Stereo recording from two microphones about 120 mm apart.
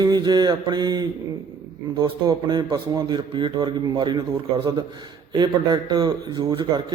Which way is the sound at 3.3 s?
45° right (ahead or behind).